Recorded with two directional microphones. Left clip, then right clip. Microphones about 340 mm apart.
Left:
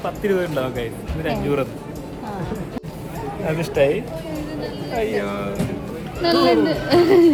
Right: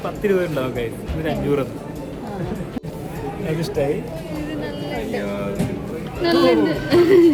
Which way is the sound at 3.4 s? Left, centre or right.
Centre.